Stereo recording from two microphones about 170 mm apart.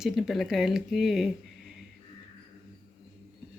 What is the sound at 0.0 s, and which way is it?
Speech, centre (ahead or behind).